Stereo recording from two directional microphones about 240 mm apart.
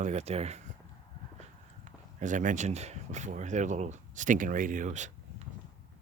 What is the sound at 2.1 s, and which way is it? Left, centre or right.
Speech, right.